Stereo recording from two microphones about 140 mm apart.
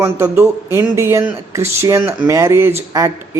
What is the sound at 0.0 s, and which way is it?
Speech, 20° right (ahead or behind).